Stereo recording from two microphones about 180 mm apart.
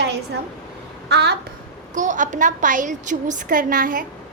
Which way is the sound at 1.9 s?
45° right (ahead or behind).